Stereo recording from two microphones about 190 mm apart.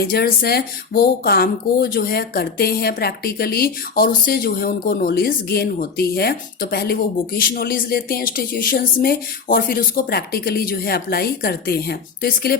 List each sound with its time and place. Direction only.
0.0 s speech: 55° left (ahead or behind)